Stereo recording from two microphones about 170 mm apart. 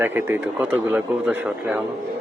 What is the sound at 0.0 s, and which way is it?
Speech, 10° right (ahead or behind).